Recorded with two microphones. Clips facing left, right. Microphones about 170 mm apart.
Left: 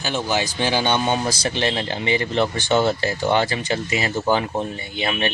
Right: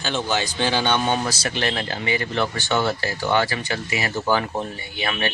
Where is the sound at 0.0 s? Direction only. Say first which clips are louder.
Left 1 dB; 10° left (ahead or behind).